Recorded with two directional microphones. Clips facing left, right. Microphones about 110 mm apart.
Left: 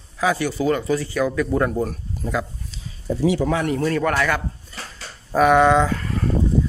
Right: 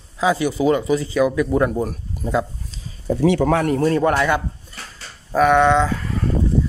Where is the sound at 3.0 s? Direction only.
55° right (ahead or behind).